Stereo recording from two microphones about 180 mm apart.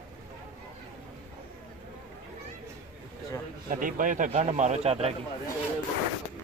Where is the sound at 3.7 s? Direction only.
50° right (ahead or behind).